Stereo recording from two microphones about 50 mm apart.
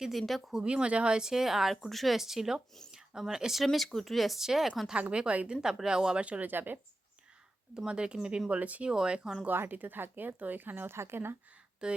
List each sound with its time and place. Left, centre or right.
0.0 s speech: centre
0.5 s speech: centre
4.9 s a woman's voice: right
5.5 s a woman's voice: centre
6.5 s speech: right
7.9 s speech: centre
8.4 s a woman's voice: right
8.9 s speech: centre
9.5 s speech: right
10.9 s speech: right
11.8 s speech: centre